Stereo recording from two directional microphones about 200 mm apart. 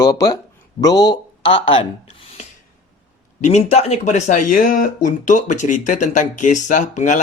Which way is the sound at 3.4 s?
35° left (ahead or behind).